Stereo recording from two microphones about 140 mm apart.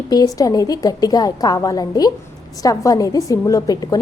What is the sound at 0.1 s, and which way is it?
A woman's voice, 25° left (ahead or behind).